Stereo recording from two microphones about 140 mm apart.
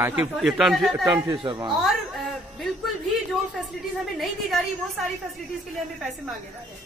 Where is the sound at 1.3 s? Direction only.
30° right (ahead or behind).